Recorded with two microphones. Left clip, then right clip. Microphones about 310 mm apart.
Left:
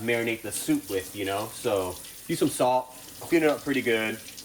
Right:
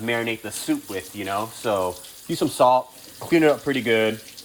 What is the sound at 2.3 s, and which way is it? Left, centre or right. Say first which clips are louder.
Speech: right 6 dB; centre.